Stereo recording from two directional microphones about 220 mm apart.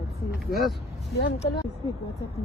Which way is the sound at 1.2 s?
50° left (ahead or behind).